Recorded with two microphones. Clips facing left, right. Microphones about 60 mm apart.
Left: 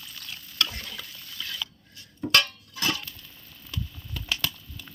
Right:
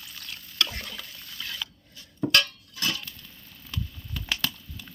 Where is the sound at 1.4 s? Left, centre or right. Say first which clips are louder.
Left 1 dB; centre.